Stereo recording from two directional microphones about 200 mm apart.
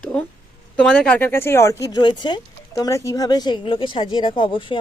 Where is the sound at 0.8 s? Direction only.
5° left (ahead or behind); by 4.8 s 25° left (ahead or behind).